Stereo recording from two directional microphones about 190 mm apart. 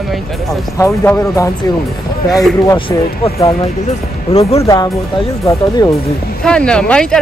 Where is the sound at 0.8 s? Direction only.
15° left (ahead or behind).